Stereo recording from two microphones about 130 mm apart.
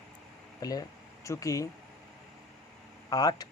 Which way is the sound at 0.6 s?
30° left (ahead or behind).